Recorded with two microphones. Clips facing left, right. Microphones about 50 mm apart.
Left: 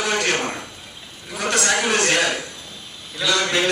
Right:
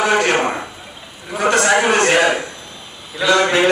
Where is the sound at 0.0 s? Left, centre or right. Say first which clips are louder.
Right 6 dB; centre.